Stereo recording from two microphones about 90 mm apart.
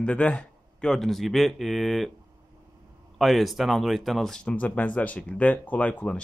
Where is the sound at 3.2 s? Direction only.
Centre (ahead or behind).